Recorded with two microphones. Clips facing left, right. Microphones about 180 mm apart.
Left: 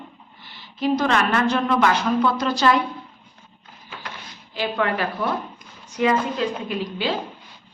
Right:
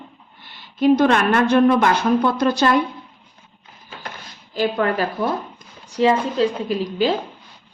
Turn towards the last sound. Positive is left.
turn(degrees=-40)  # may be behind; listen again after turning